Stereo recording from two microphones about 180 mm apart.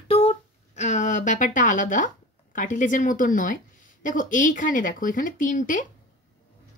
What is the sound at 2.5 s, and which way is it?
Speech, 45° left (ahead or behind).